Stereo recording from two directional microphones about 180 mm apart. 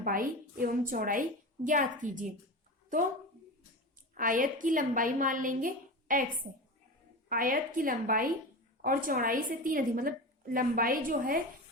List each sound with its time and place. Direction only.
0.0 s a woman's voice: 50° right (ahead or behind)
4.1 s a woman's voice: 50° right (ahead or behind)
7.3 s a woman's voice: 50° right (ahead or behind)